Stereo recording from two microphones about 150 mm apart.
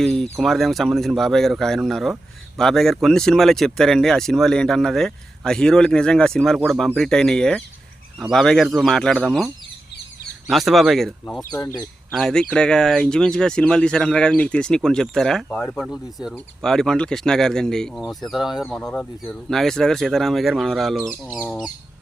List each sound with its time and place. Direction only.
0.0 s speech: 5° left (ahead or behind)
10.5 s speech: centre (ahead or behind)
11.5 s speech: 25° left (ahead or behind)
11.8 s speech: 5° left (ahead or behind)